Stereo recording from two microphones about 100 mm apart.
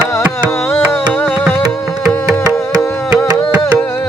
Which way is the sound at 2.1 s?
15° left (ahead or behind).